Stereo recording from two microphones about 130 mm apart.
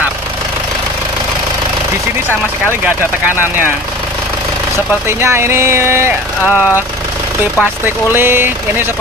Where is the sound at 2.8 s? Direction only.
15° right (ahead or behind).